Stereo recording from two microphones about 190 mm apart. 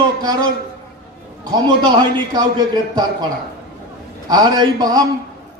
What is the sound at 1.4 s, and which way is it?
A man's voice, 20° right (ahead or behind).